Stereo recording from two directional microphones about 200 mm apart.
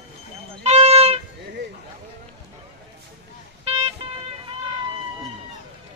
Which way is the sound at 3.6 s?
30° right (ahead or behind).